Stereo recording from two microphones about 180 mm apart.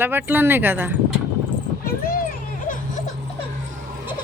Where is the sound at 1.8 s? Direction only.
55° left (ahead or behind).